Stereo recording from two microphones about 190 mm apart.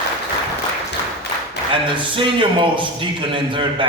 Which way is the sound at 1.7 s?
25° right (ahead or behind).